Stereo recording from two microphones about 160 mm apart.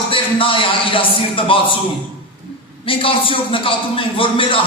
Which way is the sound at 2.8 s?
35° left (ahead or behind).